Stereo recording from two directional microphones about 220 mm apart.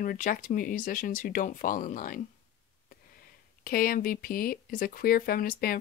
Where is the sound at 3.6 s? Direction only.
40° left (ahead or behind).